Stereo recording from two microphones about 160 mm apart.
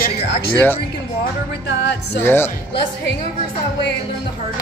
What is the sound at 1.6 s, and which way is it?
Speech, 90° left.